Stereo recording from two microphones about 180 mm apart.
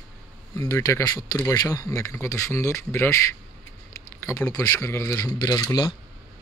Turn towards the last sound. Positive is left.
turn(degrees=20)  # may be behind; listen again after turning